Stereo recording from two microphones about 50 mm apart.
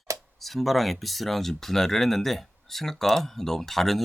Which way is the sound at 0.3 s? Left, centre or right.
Centre.